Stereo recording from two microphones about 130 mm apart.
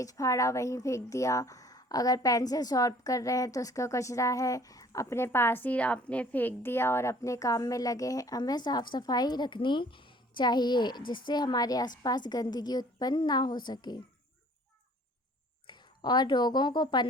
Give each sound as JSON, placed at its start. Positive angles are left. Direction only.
{"t": 0.0, "sound": "a woman's voice", "side_deg": 25}
{"t": 15.6, "sound": "speech", "side_deg": 35}